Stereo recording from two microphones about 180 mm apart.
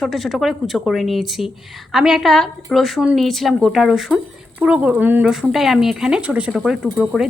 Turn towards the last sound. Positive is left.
turn(degrees=0)  # may be behind; listen again after turning